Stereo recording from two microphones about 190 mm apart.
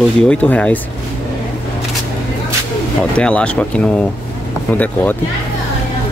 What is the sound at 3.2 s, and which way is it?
Speech, 5° left (ahead or behind).